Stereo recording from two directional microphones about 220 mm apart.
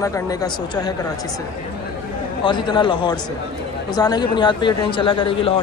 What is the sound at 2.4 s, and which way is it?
A man's voice, 20° left (ahead or behind).